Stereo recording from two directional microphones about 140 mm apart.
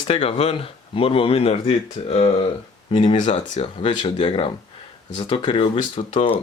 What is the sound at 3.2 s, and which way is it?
Speech, 60° left (ahead or behind).